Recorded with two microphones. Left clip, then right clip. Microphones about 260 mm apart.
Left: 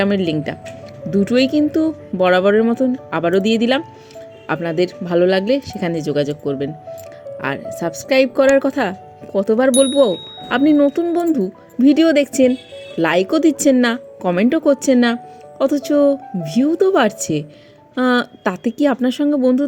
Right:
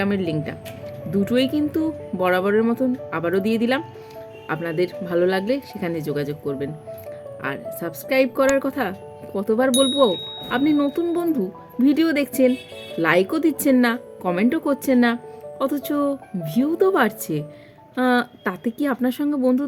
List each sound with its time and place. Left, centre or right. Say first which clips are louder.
0.0 s speech: left 6 dB; centre